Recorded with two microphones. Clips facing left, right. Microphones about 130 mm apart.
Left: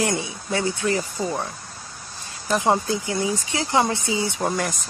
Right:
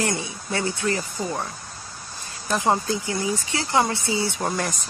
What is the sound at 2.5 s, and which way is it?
Speech, 15° left (ahead or behind).